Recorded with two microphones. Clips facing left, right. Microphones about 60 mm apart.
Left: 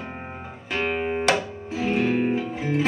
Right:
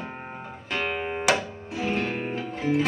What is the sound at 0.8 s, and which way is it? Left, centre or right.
Music, centre.